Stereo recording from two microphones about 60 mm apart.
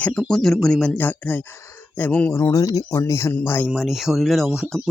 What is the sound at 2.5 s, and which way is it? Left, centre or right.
Speech, left.